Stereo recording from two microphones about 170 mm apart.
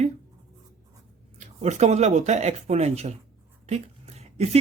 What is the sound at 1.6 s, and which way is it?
Speech, 40° right (ahead or behind).